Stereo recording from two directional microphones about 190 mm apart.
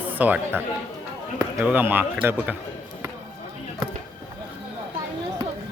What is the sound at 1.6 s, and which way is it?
Speech, 10° right (ahead or behind).